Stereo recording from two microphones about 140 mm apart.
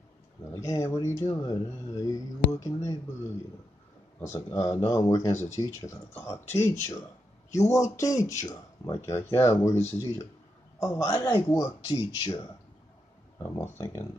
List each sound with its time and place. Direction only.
0.5 s speech: 20° left (ahead or behind)
4.2 s speech: 20° left (ahead or behind)
13.5 s speech: 20° left (ahead or behind)